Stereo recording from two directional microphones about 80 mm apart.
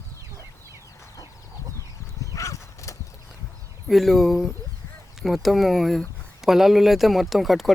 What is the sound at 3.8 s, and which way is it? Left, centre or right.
Speech, centre.